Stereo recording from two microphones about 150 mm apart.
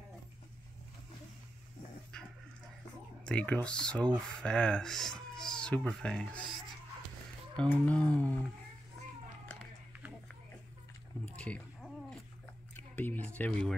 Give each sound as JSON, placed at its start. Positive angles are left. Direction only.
{"t": 2.1, "sound": "dog", "side_deg": 5}
{"t": 3.3, "sound": "speech", "side_deg": 10}
{"t": 7.5, "sound": "speech", "side_deg": 10}
{"t": 11.2, "sound": "a sound", "side_deg": 10}
{"t": 13.4, "sound": "speech", "side_deg": 10}